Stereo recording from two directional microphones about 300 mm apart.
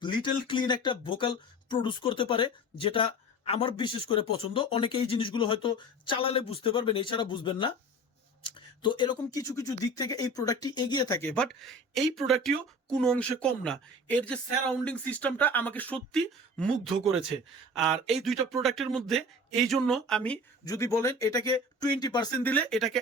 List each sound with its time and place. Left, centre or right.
0.0 s speech: centre